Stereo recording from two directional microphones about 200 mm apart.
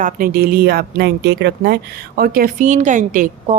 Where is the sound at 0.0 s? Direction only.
45° right (ahead or behind).